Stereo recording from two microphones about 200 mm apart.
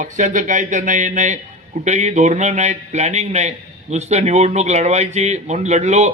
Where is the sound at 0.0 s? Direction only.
40° right (ahead or behind).